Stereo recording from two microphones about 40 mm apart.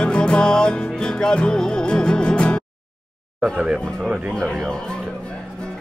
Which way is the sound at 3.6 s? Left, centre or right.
Right.